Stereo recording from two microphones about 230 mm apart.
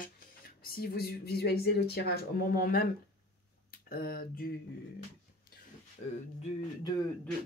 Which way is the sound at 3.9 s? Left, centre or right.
Left.